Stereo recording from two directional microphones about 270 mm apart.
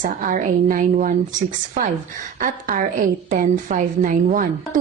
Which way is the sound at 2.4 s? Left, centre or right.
Right.